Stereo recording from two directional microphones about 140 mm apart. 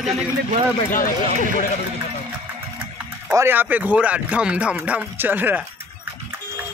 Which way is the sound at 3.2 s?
15° right (ahead or behind).